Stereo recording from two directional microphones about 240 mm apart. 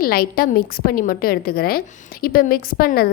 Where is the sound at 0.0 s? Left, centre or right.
Left.